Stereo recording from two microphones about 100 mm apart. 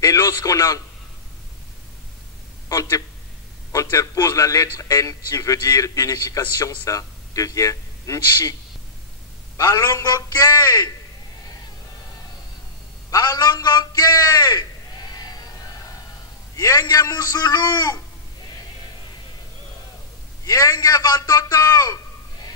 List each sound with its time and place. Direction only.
0.0 s a man's voice: 35° left (ahead or behind)
2.7 s a man's voice: 35° left (ahead or behind)
9.6 s a man's voice: 35° left (ahead or behind)
13.1 s a man's voice: 40° left (ahead or behind)
16.5 s a man's voice: 35° left (ahead or behind)
20.4 s a man's voice: 35° left (ahead or behind)